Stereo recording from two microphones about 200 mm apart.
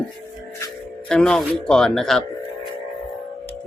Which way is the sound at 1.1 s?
5° left (ahead or behind).